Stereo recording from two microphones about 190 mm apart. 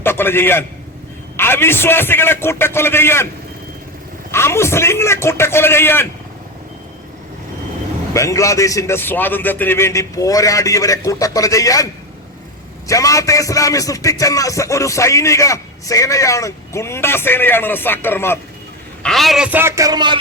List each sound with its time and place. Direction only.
0.0 s a man's voice: 10° left (ahead or behind)
4.3 s speech: 15° left (ahead or behind)
8.1 s speech: 15° left (ahead or behind)
12.9 s speech: 15° left (ahead or behind)
19.0 s a man's voice: centre (ahead or behind); by 20.1 s 20° right (ahead or behind)